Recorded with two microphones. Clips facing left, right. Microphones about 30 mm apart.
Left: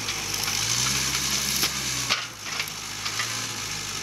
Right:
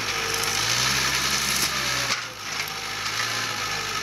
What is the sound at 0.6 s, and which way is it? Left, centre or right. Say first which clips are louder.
Vehicle: right 3 dB; right.